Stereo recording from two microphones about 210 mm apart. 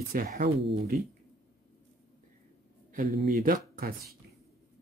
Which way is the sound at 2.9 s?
40° right (ahead or behind).